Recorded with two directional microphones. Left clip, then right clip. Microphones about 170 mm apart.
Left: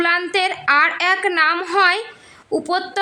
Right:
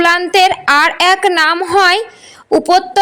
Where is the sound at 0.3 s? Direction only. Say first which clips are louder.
Right 8 dB; 30° right (ahead or behind).